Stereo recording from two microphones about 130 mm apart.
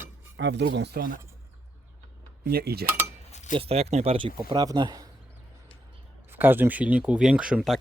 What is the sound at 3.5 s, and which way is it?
Speech, 50° right (ahead or behind).